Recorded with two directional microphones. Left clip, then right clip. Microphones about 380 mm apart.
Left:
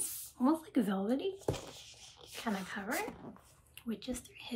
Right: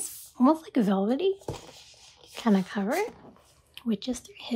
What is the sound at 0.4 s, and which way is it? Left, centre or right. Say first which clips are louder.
Speech: right 9 dB; centre.